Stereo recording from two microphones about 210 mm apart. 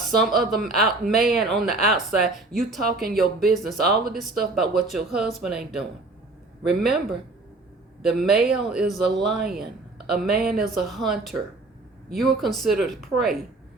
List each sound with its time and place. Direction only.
0.0 s speech: centre (ahead or behind)
2.8 s speech: 45° right (ahead or behind)
3.5 s speech: centre (ahead or behind)
10.4 s speech: centre (ahead or behind)